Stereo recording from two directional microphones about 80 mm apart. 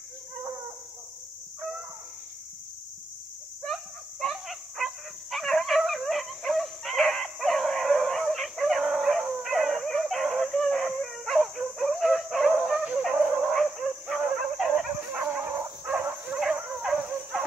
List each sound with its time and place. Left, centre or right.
3.6 s dog: centre
9.4 s a sound: centre
12.7 s dog: centre
15.4 s dog: right
16.8 s dog: centre